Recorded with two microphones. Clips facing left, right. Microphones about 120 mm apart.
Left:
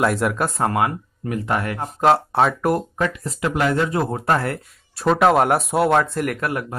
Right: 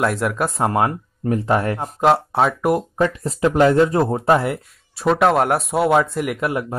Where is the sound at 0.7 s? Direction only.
30° right (ahead or behind).